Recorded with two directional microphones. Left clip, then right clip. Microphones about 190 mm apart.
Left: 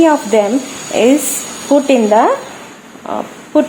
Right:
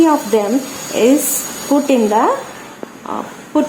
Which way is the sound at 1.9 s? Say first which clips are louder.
Left 2 dB; 25° left (ahead or behind).